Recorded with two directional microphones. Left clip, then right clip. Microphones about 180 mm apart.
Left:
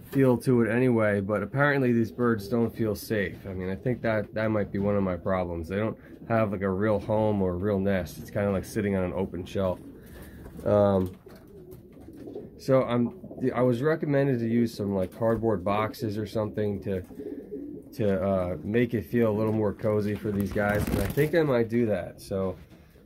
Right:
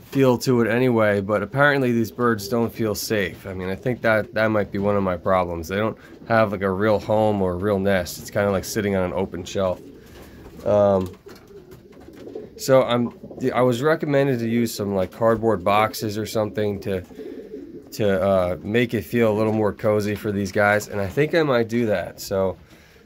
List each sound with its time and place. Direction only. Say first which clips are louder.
0.1 s speech: right 5 dB; 25° right (ahead or behind)
9.4 s speech: right 6 dB; 10° right (ahead or behind)
12.5 s speech: right 7 dB; 20° right (ahead or behind)